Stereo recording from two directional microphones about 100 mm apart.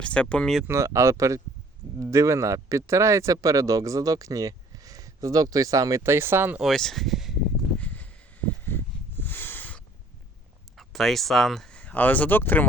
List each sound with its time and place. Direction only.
0.0 s speech: 10° left (ahead or behind)
0.7 s speech: 30° right (ahead or behind)
6.6 s speech: 5° left (ahead or behind)
7.8 s a sound: 15° left (ahead or behind)
9.2 s a sound: 20° left (ahead or behind)
10.8 s speech: centre (ahead or behind); by 12.6 s 20° left (ahead or behind)